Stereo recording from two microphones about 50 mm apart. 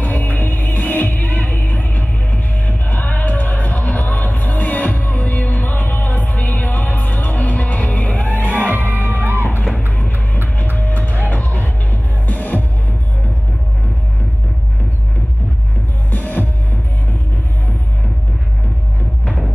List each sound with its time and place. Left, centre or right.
0.0 s music: left
8.5 s music: right
9.9 s music: left
16.1 s music: left
19.2 s music: centre